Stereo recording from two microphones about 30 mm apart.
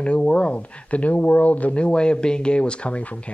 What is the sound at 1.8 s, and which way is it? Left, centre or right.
Speech, left.